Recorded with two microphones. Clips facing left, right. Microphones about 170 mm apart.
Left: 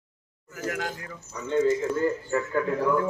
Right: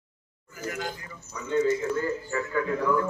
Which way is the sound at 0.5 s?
90° left.